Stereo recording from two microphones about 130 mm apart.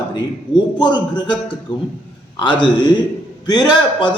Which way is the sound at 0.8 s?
35° left (ahead or behind).